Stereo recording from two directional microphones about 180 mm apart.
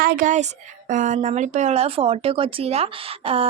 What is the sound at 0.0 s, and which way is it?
A woman's voice, 50° right (ahead or behind).